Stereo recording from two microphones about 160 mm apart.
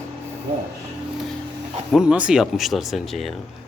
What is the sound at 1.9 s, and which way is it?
Speech, 5° right (ahead or behind).